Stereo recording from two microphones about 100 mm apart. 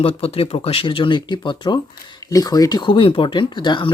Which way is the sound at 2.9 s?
60° left (ahead or behind).